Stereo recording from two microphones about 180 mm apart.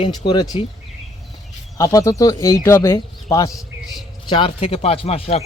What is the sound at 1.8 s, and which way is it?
A man's voice, 20° left (ahead or behind).